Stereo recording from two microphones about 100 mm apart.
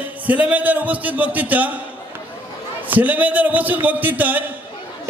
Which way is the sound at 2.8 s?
15° right (ahead or behind).